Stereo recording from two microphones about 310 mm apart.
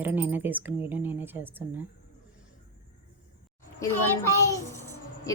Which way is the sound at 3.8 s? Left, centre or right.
Centre.